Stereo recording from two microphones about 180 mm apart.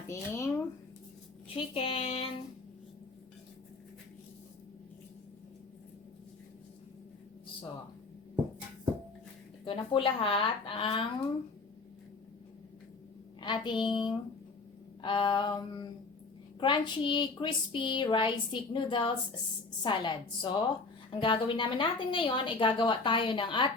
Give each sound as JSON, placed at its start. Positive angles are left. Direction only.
{"t": 0.1, "sound": "speech", "side_deg": 15}
{"t": 1.5, "sound": "speech", "side_deg": 30}
{"t": 9.6, "sound": "speech", "side_deg": 30}
{"t": 13.4, "sound": "a woman's voice", "side_deg": 25}